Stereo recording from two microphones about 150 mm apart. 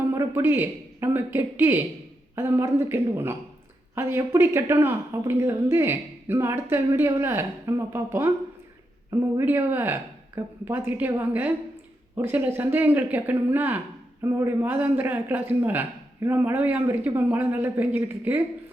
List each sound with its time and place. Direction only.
0.1 s speech: 20° right (ahead or behind)